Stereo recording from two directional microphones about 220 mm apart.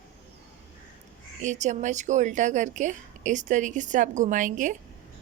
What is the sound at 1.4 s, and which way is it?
A woman's voice, 35° right (ahead or behind).